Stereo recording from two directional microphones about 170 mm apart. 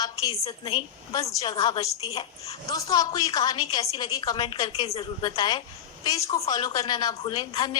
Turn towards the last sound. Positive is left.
turn(degrees=25)  # may be behind; listen again after turning